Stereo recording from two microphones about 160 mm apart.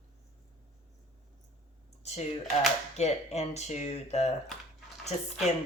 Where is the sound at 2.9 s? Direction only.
45° left (ahead or behind).